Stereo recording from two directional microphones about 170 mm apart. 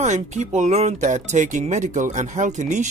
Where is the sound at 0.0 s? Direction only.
45° right (ahead or behind).